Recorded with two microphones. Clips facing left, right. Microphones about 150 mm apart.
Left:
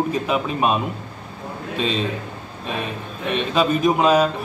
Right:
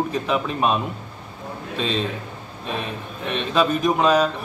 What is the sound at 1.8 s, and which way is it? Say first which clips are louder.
Speech: left 1 dB; 5° left (ahead or behind).